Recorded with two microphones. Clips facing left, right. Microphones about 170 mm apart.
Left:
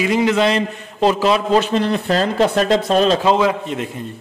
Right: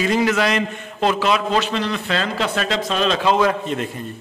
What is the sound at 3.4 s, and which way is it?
Speech, 15° left (ahead or behind).